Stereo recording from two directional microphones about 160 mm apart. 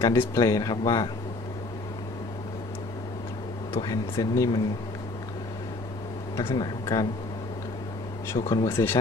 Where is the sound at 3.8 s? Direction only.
20° left (ahead or behind).